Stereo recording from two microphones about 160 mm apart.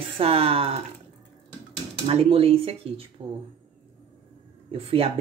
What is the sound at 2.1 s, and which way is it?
Speech, 35° right (ahead or behind).